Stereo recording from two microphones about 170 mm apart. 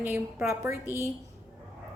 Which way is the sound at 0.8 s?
15° left (ahead or behind).